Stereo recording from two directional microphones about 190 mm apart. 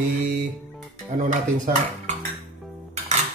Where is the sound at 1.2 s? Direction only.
40° right (ahead or behind).